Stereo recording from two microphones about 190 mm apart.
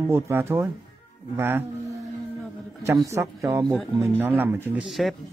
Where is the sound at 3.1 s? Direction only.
15° right (ahead or behind).